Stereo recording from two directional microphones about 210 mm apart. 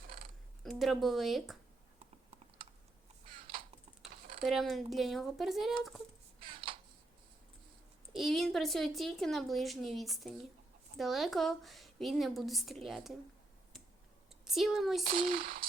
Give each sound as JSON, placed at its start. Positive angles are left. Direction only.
{"t": 0.6, "sound": "a woman's voice", "side_deg": 0}
{"t": 4.4, "sound": "a woman's voice", "side_deg": 0}
{"t": 6.4, "sound": "a sound", "side_deg": -25}
{"t": 8.1, "sound": "a woman's voice", "side_deg": 0}
{"t": 14.4, "sound": "speech", "side_deg": 0}
{"t": 15.0, "sound": "a sound", "side_deg": -45}